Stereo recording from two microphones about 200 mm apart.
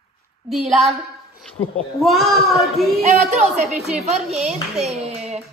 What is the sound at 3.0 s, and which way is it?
A man's voice, 35° right (ahead or behind).